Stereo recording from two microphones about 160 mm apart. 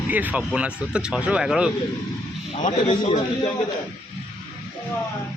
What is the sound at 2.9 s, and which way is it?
Speech, 30° left (ahead or behind).